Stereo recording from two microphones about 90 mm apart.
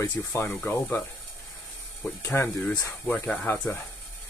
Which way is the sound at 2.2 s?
25° left (ahead or behind).